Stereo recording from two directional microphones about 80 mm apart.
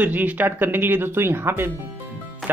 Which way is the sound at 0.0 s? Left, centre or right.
Right.